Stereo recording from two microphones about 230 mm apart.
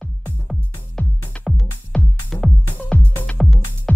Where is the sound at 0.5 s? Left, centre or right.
Centre.